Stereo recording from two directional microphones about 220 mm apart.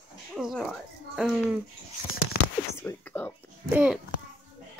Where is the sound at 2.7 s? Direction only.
10° left (ahead or behind).